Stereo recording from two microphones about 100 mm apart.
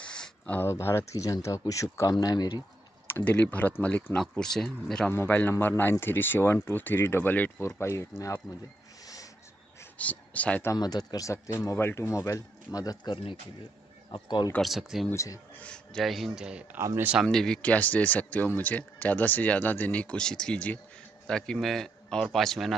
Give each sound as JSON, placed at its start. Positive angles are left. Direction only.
{"t": 0.0, "sound": "a sound", "side_deg": 10}
{"t": 0.6, "sound": "speech", "side_deg": 25}
{"t": 3.1, "sound": "speech", "side_deg": 20}
{"t": 5.0, "sound": "speech", "side_deg": 20}
{"t": 7.6, "sound": "speech", "side_deg": 30}
{"t": 8.5, "sound": "a man's voice", "side_deg": 0}
{"t": 9.0, "sound": "music", "side_deg": 35}
{"t": 9.9, "sound": "speech", "side_deg": 15}
{"t": 10.8, "sound": "speech", "side_deg": 45}
{"t": 14.6, "sound": "a man's voice", "side_deg": 0}
{"t": 15.1, "sound": "speech", "side_deg": 35}
{"t": 15.6, "sound": "a man's voice", "side_deg": 10}
{"t": 16.7, "sound": "a man's voice", "side_deg": -25}
{"t": 17.2, "sound": "a man's voice", "side_deg": 5}